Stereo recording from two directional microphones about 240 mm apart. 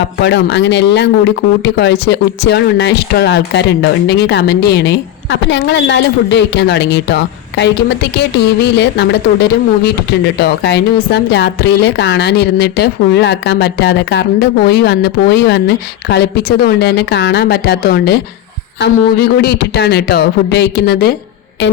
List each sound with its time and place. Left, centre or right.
0.2 s speech: left
19.4 s speech: left